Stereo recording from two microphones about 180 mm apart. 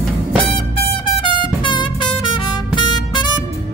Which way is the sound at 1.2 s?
25° left (ahead or behind).